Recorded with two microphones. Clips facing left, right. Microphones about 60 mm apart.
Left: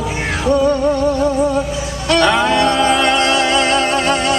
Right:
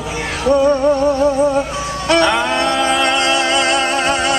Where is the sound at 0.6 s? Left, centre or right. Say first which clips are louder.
Right 2 dB; centre.